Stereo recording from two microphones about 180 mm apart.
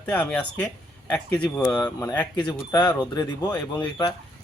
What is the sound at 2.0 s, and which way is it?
Speech, 20° left (ahead or behind).